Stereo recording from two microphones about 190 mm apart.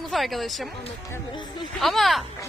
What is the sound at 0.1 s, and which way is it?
Speech, centre (ahead or behind).